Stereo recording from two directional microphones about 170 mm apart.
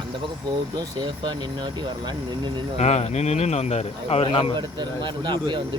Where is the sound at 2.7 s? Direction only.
40° left (ahead or behind).